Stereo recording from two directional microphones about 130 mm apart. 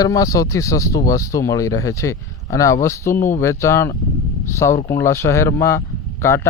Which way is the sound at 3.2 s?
80° left.